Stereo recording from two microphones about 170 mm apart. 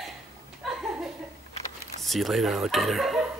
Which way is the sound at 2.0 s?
Centre (ahead or behind).